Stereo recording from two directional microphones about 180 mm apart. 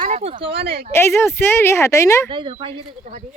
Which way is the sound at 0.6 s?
60° right (ahead or behind).